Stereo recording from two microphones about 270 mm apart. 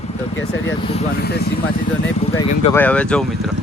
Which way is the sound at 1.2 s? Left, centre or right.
Left.